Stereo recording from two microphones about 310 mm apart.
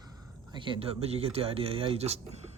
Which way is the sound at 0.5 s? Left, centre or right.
Centre.